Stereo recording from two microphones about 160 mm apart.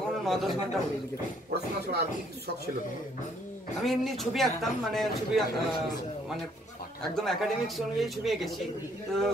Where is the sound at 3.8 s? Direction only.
Centre (ahead or behind).